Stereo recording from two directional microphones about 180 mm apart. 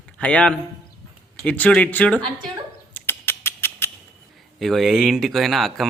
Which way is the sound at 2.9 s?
10° left (ahead or behind).